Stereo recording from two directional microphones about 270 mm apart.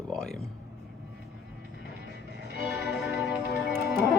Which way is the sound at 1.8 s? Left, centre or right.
Left.